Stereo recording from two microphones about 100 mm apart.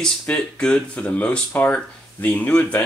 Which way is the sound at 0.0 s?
10° left (ahead or behind).